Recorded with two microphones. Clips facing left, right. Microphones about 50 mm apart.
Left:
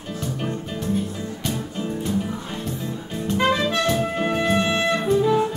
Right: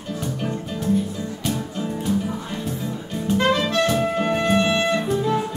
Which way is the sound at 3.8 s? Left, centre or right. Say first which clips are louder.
Right 1 dB; centre.